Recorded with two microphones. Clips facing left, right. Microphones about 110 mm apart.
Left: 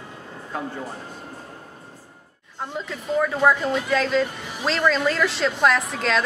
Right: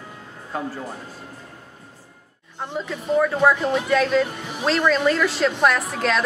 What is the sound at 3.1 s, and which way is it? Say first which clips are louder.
A woman's voice: right 2 dB; 5° right (ahead or behind).